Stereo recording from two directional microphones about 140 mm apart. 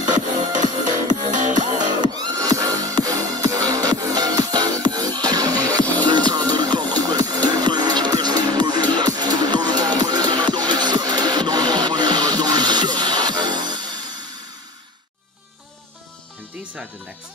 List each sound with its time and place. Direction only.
0.4 s music: 60° right (ahead or behind)
2.0 s music: 30° right (ahead or behind)